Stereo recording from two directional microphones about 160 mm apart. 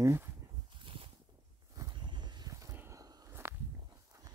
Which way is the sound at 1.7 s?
25° right (ahead or behind).